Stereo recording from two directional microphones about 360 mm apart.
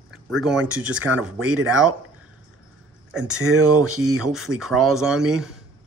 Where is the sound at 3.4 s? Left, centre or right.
Right.